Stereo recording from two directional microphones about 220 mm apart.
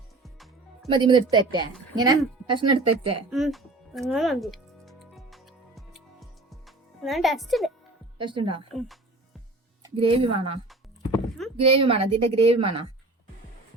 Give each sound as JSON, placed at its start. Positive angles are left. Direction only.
{"t": 0.2, "sound": "music", "side_deg": 0}
{"t": 0.9, "sound": "a woman's voice", "side_deg": -20}
{"t": 3.2, "sound": "speech", "side_deg": 0}
{"t": 4.1, "sound": "music", "side_deg": 0}
{"t": 8.2, "sound": "a woman's voice", "side_deg": -20}
{"t": 9.8, "sound": "a woman's voice", "side_deg": -25}